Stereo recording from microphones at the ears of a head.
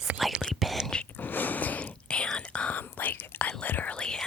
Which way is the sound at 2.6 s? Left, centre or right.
Left.